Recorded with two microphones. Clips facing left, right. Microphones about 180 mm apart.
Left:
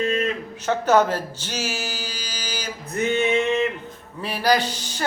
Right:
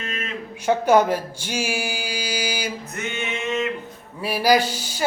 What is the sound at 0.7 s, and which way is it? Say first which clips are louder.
Speech: right 2 dB; 10° right (ahead or behind).